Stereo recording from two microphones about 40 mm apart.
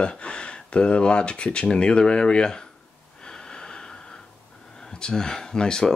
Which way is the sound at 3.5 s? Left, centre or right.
Left.